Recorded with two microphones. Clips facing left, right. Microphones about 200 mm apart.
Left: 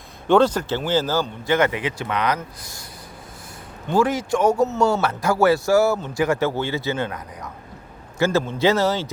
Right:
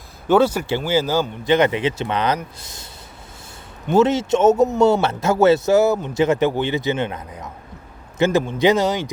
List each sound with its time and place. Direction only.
0.3 s speech: 10° right (ahead or behind); by 2.8 s 25° right (ahead or behind)
3.8 s speech: 25° right (ahead or behind)